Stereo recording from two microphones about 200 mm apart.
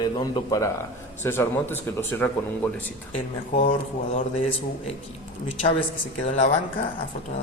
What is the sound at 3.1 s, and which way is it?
Speech, 40° left (ahead or behind).